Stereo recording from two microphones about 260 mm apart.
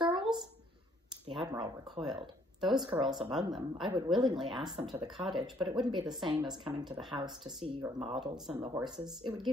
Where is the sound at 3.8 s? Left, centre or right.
Centre.